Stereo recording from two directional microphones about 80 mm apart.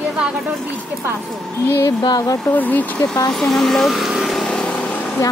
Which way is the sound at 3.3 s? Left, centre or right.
Centre.